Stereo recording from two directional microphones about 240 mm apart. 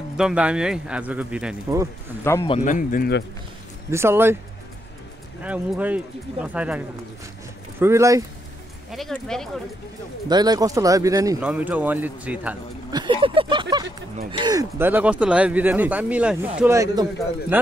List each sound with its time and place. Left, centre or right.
0.2 s speech: centre
2.4 s speech: left
3.9 s speech: centre
5.4 s speech: centre
7.8 s speech: centre
8.9 s speech: centre
10.2 s speech: centre
12.9 s speech: centre